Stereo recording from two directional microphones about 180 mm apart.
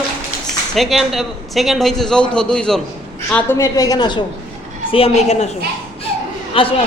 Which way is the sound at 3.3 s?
15° left (ahead or behind).